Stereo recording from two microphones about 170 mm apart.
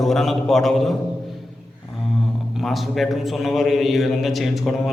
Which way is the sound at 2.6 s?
Centre (ahead or behind).